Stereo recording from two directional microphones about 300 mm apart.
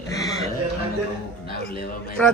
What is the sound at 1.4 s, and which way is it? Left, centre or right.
Speech, left.